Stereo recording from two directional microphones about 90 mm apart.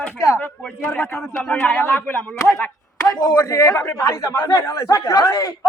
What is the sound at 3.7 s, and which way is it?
Speech, 25° left (ahead or behind).